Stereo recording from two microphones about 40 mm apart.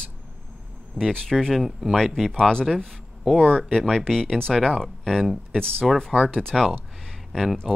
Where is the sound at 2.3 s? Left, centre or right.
Centre.